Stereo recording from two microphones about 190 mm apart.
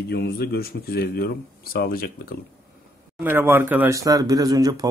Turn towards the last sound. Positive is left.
turn(degrees=-20)  # may be behind; listen again after turning